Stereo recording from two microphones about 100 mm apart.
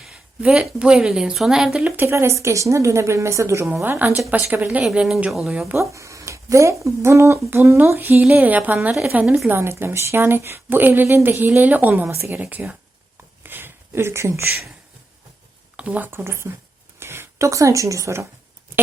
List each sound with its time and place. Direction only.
0.0 s a woman's voice: 5° right (ahead or behind)
2.0 s a woman's voice: 25° right (ahead or behind)
4.9 s speech: 5° right (ahead or behind)
5.7 s a woman's voice: 30° right (ahead or behind)
13.4 s a sound: 20° right (ahead or behind)
15.7 s speech: 15° right (ahead or behind); by 18.3 s 30° right (ahead or behind)